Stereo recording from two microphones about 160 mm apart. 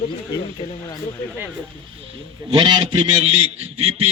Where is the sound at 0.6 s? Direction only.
35° left (ahead or behind).